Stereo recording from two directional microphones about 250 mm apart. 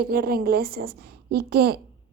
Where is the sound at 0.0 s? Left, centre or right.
Right.